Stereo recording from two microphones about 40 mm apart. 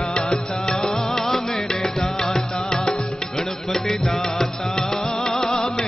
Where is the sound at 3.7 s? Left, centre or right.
Centre.